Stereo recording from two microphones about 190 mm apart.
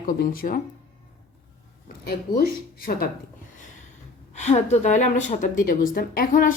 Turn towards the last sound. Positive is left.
turn(degrees=45)  # may be behind; listen again after turning